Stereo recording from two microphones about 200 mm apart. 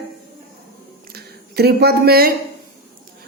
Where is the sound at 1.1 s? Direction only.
50° right (ahead or behind).